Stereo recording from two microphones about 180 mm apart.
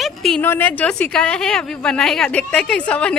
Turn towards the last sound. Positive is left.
turn(degrees=5)  # may be behind; listen again after turning